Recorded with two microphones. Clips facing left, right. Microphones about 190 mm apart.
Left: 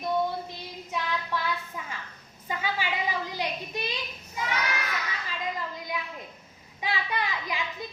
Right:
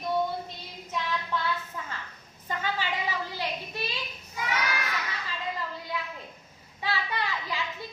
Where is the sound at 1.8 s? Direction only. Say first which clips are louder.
Even; 15° left (ahead or behind).